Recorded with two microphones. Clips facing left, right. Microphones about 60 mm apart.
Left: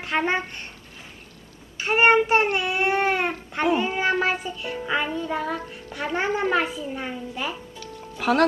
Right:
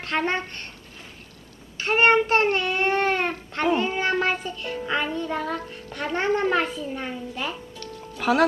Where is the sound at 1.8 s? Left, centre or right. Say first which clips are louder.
Left 1 dB; centre.